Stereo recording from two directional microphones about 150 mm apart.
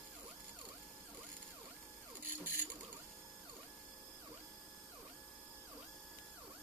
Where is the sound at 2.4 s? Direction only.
15° right (ahead or behind).